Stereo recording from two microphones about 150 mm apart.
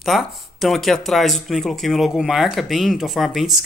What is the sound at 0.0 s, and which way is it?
Speech, centre (ahead or behind).